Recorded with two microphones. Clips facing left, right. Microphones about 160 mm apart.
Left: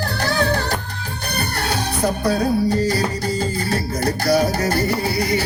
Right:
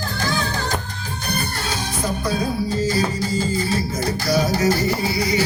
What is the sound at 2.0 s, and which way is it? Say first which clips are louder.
Music: left 4 dB; 65° left (ahead or behind).